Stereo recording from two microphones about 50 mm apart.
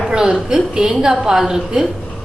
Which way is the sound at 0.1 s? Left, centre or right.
Centre.